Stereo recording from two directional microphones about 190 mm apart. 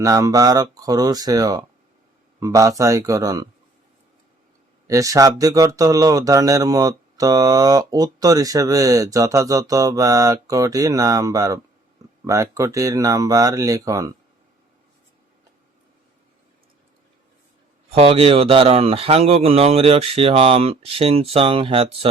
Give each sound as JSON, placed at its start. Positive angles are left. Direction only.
{"t": 0.0, "sound": "speech", "side_deg": -15}
{"t": 4.9, "sound": "speech", "side_deg": -15}
{"t": 17.8, "sound": "speech", "side_deg": -30}